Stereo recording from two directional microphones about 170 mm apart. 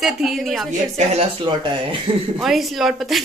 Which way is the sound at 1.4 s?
30° right (ahead or behind).